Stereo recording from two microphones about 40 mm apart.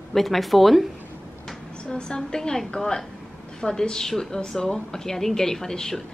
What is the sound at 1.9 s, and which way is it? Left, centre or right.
A woman's voice, centre.